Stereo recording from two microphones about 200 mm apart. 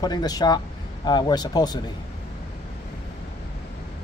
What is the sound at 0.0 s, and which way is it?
Speech, 20° left (ahead or behind).